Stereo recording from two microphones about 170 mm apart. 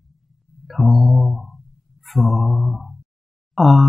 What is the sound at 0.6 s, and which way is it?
Mantra, centre (ahead or behind).